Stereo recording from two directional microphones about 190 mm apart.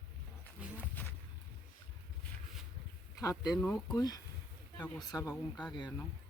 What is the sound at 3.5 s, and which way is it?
Speech, centre (ahead or behind).